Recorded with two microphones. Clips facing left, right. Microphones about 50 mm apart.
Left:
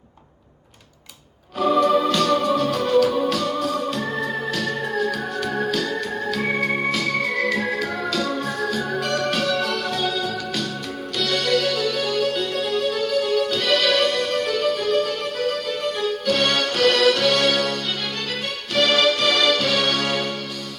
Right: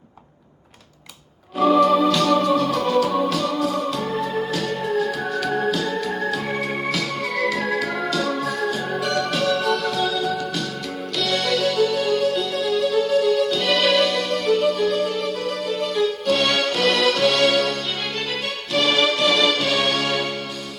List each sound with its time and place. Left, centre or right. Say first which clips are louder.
1.5 s music: right 2 dB; right
5.7 s organ: even; right
7.0 s music: left 1 dB; right
9.0 s music: even; left
9.4 s music: right 2 dB; right
9.9 s music: right 1 dB; left
11.2 s music: even; right
12.4 s music: right 2 dB; left
13.7 s music: even; right
13.9 s music: right 1 dB; left
16.5 s music: left 1 dB; right
18.9 s music: even; right